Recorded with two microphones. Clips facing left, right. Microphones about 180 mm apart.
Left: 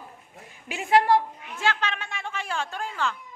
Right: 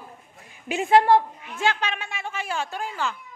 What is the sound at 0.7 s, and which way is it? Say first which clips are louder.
A woman's voice: right 3 dB; 25° right (ahead or behind).